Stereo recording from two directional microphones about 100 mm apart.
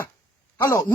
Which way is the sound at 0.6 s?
30° left (ahead or behind).